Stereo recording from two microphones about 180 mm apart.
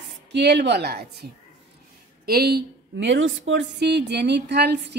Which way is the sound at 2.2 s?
60° right (ahead or behind).